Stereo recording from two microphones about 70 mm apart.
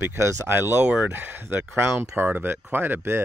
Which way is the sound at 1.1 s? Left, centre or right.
Right.